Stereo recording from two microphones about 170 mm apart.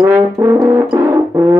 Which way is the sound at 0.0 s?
15° right (ahead or behind).